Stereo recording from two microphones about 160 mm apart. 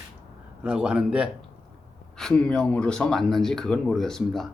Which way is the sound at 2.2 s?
5° left (ahead or behind).